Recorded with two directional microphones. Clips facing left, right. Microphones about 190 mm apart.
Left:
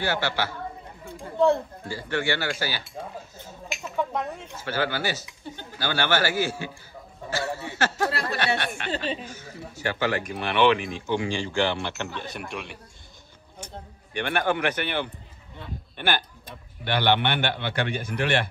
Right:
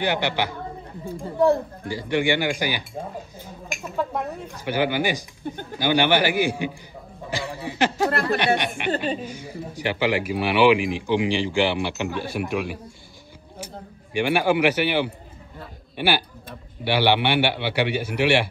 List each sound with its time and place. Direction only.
0.0 s speech: 15° right (ahead or behind)
1.9 s speech: 15° right (ahead or behind)
3.8 s speech: 5° right (ahead or behind)
5.4 s speech: 50° right (ahead or behind)
5.8 s speech: 15° right (ahead or behind)
7.2 s a sound: 15° right (ahead or behind)
8.1 s speech: 55° right (ahead or behind)
8.5 s speech: 15° right (ahead or behind)
14.1 s a man's voice: 10° right (ahead or behind)